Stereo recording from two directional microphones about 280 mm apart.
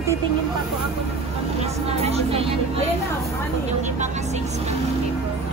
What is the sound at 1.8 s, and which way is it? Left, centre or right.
Vehicle, right.